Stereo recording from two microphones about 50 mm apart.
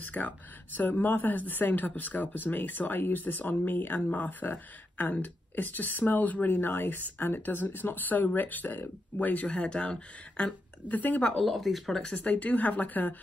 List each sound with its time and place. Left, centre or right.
0.0 s speech: left
9.5 s a woman's voice: left
11.0 s speech: left
11.3 s speech: centre
12.1 s speech: left